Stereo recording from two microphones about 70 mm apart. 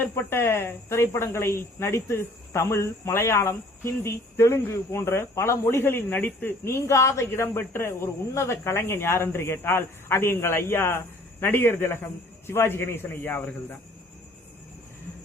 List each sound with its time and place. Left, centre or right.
0.0 s speech: left
6.7 s speech: left